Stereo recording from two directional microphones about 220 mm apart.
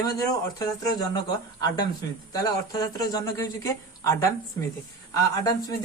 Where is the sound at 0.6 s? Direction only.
20° left (ahead or behind).